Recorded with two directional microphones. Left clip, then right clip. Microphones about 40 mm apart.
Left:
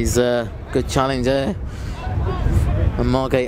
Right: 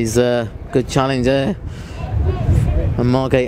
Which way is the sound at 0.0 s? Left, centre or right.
Left.